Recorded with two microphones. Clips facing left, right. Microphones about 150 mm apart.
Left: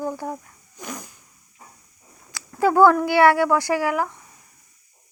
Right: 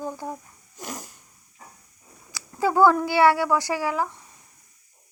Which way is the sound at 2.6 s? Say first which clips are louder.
Left 3 dB; 15° right (ahead or behind).